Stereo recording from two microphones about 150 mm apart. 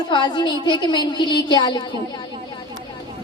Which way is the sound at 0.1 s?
30° left (ahead or behind).